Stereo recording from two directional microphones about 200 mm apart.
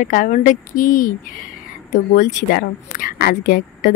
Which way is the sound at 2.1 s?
40° left (ahead or behind).